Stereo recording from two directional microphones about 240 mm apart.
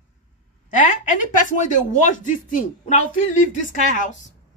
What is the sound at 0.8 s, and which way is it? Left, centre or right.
Speech, left.